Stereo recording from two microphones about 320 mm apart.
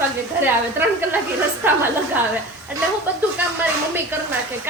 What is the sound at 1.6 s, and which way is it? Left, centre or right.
Speech, centre.